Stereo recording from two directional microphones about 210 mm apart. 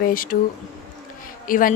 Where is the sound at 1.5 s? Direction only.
40° left (ahead or behind).